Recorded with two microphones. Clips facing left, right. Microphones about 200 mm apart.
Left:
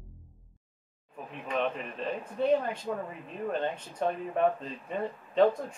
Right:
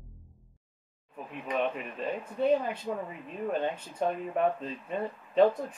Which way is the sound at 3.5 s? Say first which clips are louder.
Right 1 dB; 10° right (ahead or behind).